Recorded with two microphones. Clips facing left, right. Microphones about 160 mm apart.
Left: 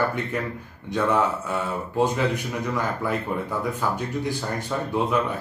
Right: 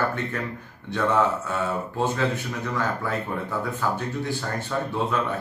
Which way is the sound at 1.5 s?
15° left (ahead or behind).